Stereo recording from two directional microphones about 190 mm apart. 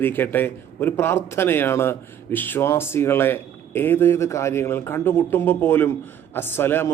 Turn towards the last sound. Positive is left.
turn(degrees=10)  # may be behind; listen again after turning